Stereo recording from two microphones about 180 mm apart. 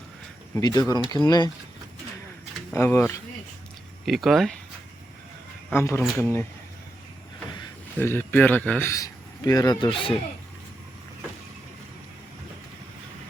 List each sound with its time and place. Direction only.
0.5 s speech: 20° left (ahead or behind)
2.7 s speech: 15° left (ahead or behind)
4.0 s speech: centre (ahead or behind)
5.7 s speech: 15° left (ahead or behind)
7.9 s a man's voice: 10° left (ahead or behind)